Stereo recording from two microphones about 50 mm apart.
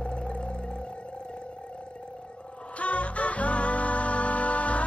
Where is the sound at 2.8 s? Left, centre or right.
Left.